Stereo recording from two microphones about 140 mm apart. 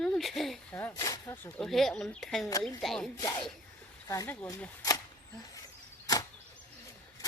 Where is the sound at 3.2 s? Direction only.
25° left (ahead or behind).